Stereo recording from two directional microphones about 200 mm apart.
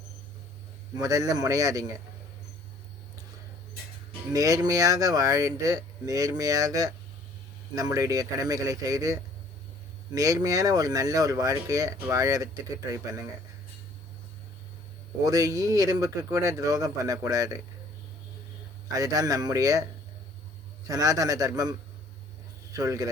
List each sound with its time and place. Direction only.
0.9 s speech: 15° right (ahead or behind)
4.3 s speech: 15° right (ahead or behind)
15.2 s speech: 15° right (ahead or behind)
18.9 s speech: 15° right (ahead or behind)